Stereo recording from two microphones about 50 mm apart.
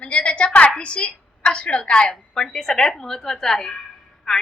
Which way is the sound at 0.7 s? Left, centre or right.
Left.